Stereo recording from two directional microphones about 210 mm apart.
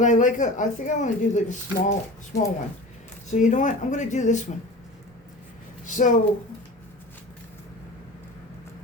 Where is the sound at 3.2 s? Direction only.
35° left (ahead or behind).